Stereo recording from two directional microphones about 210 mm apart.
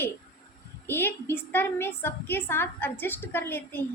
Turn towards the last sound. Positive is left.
turn(degrees=10)  # may be behind; listen again after turning